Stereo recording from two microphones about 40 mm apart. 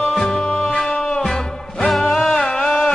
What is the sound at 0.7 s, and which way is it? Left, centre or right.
Music, left.